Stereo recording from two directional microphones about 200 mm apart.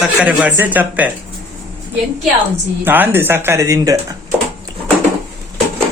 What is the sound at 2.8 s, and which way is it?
Speech, 10° right (ahead or behind).